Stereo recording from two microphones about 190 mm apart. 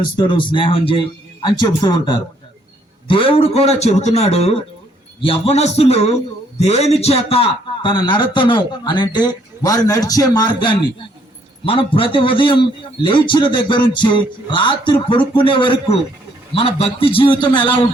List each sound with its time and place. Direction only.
0.3 s a man's voice: 25° left (ahead or behind)